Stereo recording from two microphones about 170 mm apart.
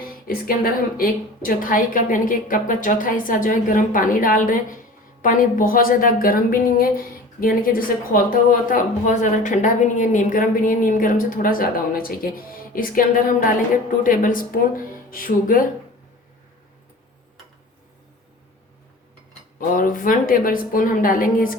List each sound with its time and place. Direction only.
0.3 s a woman's voice: 60° left (ahead or behind)
19.5 s a woman's voice: 55° left (ahead or behind)